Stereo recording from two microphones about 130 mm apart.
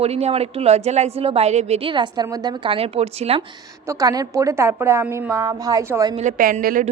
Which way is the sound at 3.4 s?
35° right (ahead or behind).